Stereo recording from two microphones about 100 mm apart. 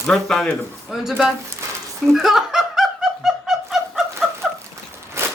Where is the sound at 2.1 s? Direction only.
5° right (ahead or behind).